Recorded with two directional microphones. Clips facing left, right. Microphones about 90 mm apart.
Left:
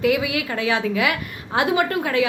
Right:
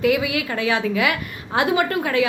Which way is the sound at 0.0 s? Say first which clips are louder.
Right 1 dB; 15° left (ahead or behind).